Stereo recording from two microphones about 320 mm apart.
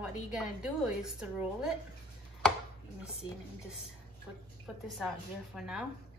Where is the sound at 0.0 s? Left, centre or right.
Centre.